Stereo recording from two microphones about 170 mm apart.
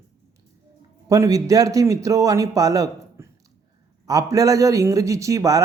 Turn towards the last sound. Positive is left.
turn(degrees=-20)  # may be behind; listen again after turning